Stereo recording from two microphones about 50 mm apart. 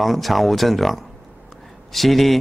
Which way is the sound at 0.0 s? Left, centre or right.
Centre.